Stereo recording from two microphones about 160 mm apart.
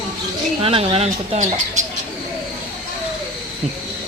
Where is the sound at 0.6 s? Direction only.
35° right (ahead or behind).